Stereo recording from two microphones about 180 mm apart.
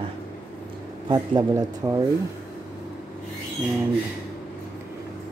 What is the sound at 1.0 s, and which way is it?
Speech, 25° right (ahead or behind).